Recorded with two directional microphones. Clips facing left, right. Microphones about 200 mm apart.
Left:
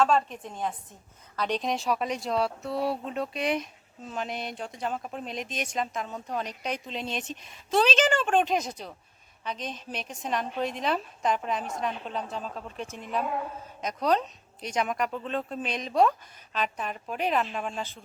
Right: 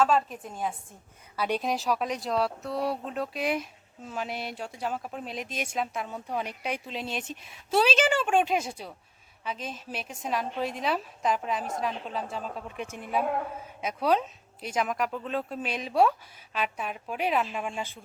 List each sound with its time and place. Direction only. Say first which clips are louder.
0.0 s speech: even; 5° right (ahead or behind)
12.8 s a woman's voice: even; 55° right (ahead or behind)
13.8 s speech: even; 5° right (ahead or behind)